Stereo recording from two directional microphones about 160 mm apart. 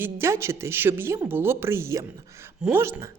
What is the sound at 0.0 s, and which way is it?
A woman's voice, 15° right (ahead or behind).